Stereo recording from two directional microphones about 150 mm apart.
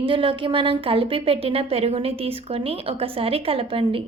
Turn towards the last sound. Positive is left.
turn(degrees=-35)  # may be behind; listen again after turning